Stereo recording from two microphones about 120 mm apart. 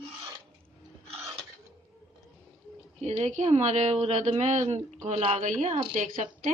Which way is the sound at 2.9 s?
65° right (ahead or behind).